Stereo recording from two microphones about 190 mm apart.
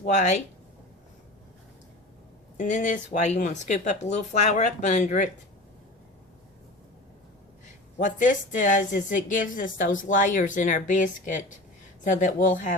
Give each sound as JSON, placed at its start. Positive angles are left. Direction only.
{"t": 0.0, "sound": "speech", "side_deg": 40}
{"t": 2.6, "sound": "speech", "side_deg": 40}
{"t": 7.9, "sound": "a woman's voice", "side_deg": 40}